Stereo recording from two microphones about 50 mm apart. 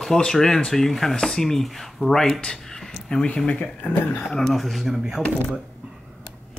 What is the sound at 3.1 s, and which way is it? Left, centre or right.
A man's voice, centre.